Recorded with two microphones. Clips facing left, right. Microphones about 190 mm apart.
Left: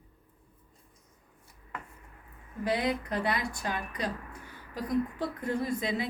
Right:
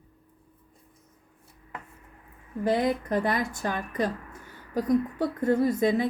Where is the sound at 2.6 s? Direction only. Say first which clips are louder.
Right 5 dB; 45° right (ahead or behind).